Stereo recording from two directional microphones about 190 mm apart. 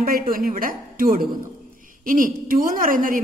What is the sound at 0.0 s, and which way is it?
Speech, 50° right (ahead or behind).